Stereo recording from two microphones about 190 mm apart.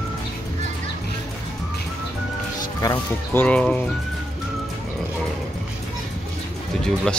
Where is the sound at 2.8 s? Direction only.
20° left (ahead or behind).